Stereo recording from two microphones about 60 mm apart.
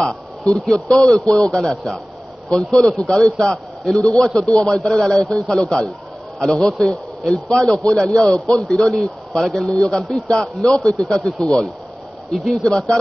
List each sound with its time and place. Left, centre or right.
0.4 s a man's voice: centre
12.6 s a man's voice: centre